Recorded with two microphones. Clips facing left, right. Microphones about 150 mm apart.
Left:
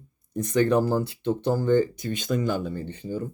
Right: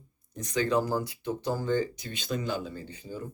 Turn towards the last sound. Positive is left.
turn(degrees=60)  # may be behind; listen again after turning